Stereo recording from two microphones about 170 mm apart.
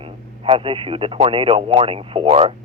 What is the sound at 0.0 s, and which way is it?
Speech, 30° right (ahead or behind).